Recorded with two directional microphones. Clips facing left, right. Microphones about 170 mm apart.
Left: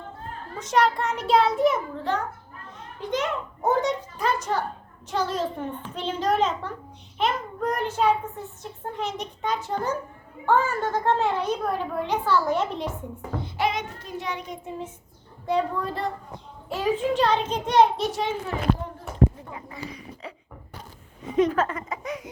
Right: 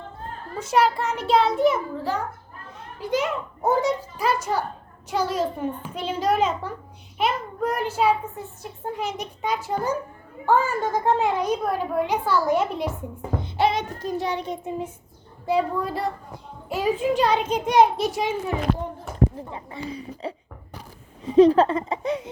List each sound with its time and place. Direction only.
0.6 s a child's voice: 5° right (ahead or behind)
13.6 s child singing: 30° right (ahead or behind)
15.4 s a child's voice: 10° right (ahead or behind)
19.5 s speech: 30° right (ahead or behind)
21.2 s child singing: 30° right (ahead or behind)